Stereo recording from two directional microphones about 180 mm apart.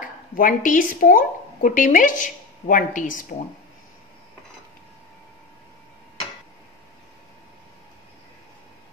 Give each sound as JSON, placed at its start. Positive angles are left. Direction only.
{"t": 0.3, "sound": "speech", "side_deg": 50}